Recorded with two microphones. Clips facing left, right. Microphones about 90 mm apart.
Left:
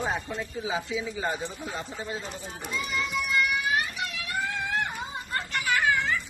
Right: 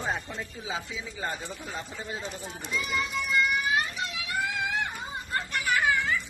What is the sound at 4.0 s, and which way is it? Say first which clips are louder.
Vehicle: even; 15° right (ahead or behind).